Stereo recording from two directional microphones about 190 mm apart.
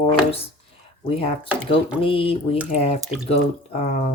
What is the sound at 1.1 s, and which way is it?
Speech, 30° left (ahead or behind).